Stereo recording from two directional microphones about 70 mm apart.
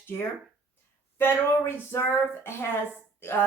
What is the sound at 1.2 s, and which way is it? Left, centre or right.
A woman's voice, left.